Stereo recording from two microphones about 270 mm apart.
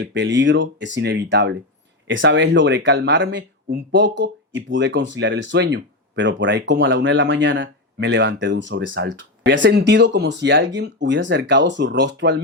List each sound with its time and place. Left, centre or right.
0.0 s speech: right